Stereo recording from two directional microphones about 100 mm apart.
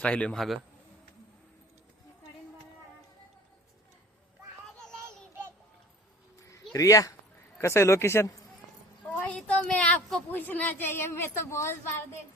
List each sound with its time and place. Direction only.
0.0 s a woman's voice: 10° left (ahead or behind)
6.7 s speech: 35° left (ahead or behind)
9.2 s a woman's voice: 10° left (ahead or behind); by 11.8 s 25° left (ahead or behind)